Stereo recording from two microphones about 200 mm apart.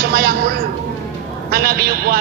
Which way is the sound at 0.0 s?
50° right (ahead or behind).